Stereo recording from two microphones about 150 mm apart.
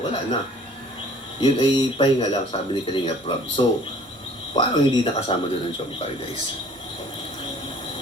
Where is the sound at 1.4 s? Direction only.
30° left (ahead or behind).